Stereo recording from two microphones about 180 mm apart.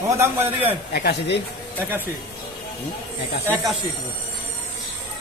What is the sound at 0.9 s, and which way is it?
Speech, 60° left (ahead or behind).